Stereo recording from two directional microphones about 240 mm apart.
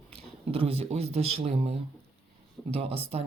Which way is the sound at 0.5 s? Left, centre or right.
Right.